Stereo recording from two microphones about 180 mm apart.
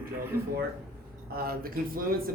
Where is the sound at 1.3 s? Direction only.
55° right (ahead or behind).